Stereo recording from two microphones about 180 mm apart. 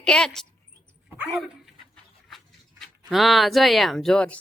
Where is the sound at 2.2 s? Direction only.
Centre (ahead or behind).